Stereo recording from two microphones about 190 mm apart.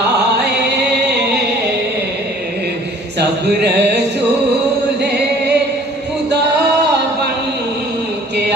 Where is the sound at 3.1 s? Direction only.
60° right (ahead or behind).